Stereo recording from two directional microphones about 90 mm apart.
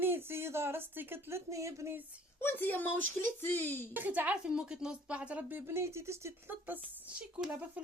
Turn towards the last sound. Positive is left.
turn(degrees=-15)  # may be behind; listen again after turning